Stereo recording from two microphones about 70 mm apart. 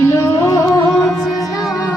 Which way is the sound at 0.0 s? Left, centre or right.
Left.